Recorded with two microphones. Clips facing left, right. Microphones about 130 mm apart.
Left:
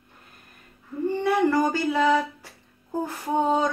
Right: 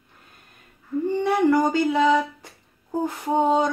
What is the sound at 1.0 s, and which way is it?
Speech, 15° right (ahead or behind).